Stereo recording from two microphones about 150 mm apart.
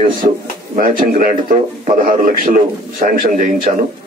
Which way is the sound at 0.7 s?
70° right (ahead or behind).